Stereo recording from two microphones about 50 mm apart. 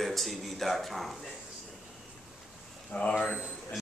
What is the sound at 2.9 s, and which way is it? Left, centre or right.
Speech, left.